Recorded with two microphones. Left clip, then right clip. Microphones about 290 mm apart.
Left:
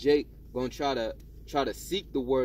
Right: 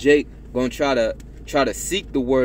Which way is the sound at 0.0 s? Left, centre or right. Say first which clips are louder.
Right 9 dB; centre.